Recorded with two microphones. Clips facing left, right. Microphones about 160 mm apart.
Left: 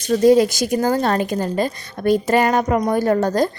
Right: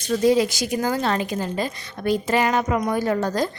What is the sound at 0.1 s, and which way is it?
A woman's voice, 45° left (ahead or behind).